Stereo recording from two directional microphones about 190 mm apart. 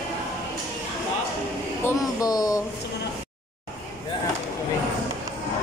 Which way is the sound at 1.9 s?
20° left (ahead or behind).